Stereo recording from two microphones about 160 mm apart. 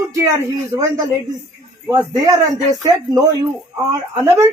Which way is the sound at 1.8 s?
20° right (ahead or behind).